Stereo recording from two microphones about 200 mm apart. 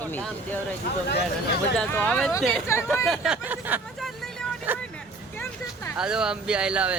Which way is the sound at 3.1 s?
5° right (ahead or behind).